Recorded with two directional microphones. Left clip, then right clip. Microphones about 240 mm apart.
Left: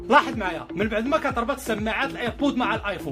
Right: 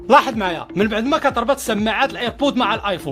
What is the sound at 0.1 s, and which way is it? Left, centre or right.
Speech, right.